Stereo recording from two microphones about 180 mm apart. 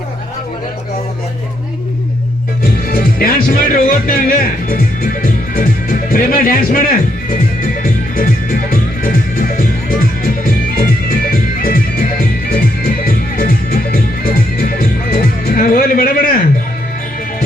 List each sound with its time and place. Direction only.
2.8 s music: 55° left (ahead or behind)